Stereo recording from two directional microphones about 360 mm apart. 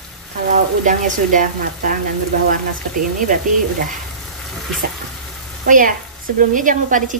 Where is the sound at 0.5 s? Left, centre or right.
Right.